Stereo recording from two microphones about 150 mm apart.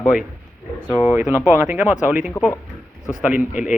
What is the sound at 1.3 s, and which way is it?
A man's voice, 15° right (ahead or behind).